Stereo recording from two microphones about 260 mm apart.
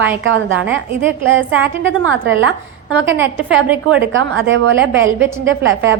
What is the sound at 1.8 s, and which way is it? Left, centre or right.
Speech, right.